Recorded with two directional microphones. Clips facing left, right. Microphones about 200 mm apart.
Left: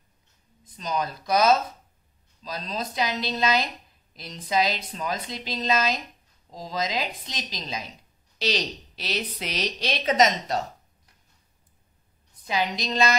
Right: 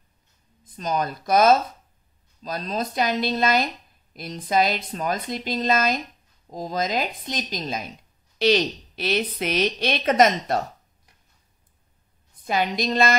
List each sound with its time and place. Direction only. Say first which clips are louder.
0.7 s a woman's voice: right 3 dB; 50° right (ahead or behind)
12.4 s a woman's voice: right 4 dB; 55° right (ahead or behind)